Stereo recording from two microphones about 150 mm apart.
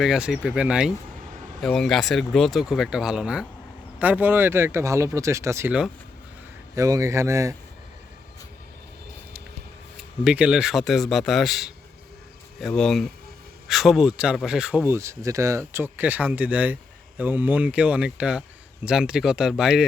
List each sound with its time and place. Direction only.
0.0 s speech: 5° right (ahead or behind)
6.7 s speech: 20° right (ahead or behind)
10.2 s speech: 5° right (ahead or behind)